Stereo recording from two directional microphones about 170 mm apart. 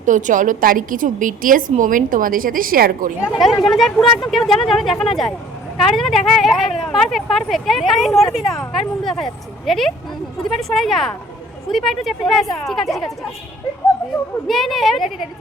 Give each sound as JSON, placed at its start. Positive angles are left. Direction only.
{"t": 0.0, "sound": "a woman's voice", "side_deg": -50}
{"t": 3.4, "sound": "speech", "side_deg": 0}
{"t": 14.4, "sound": "speech", "side_deg": 0}